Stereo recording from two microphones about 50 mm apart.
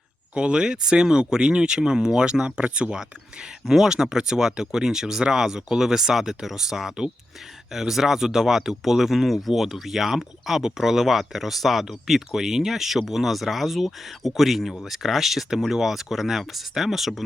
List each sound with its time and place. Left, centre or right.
0.3 s speech: centre